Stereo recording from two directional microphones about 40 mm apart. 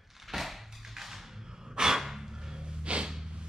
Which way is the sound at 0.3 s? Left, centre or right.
Centre.